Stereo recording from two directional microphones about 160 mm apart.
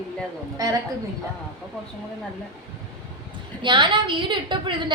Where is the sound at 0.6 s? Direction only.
20° right (ahead or behind).